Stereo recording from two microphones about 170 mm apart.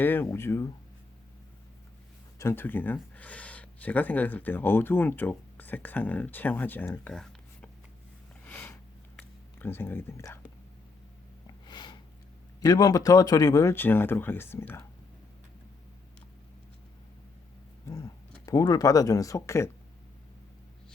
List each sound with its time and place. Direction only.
0.0 s speech: 10° left (ahead or behind)
2.4 s speech: 15° left (ahead or behind)
8.4 s sniff: 15° left (ahead or behind)
11.6 s sniff: 25° left (ahead or behind)
12.6 s speech: 20° left (ahead or behind)
17.8 s speech: 20° left (ahead or behind)